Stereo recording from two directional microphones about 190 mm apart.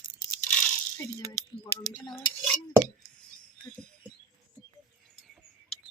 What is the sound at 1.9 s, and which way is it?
Cutlery, 15° right (ahead or behind).